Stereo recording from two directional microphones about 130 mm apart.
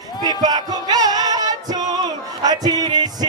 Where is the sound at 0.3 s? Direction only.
30° right (ahead or behind).